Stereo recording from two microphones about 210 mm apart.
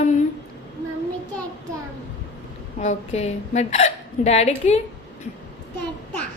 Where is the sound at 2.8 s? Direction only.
30° left (ahead or behind).